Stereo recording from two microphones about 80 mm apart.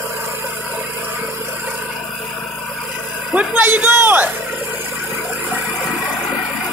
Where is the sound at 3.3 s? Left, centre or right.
Right.